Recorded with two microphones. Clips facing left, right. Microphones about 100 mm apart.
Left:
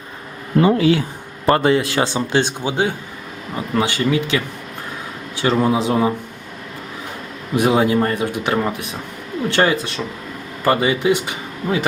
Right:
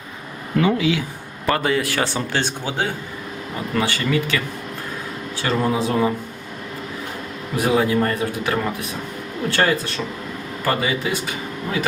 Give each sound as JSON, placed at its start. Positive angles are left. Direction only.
{"t": 0.5, "sound": "speech", "side_deg": 35}
{"t": 5.4, "sound": "speech", "side_deg": 15}
{"t": 7.5, "sound": "speech", "side_deg": 20}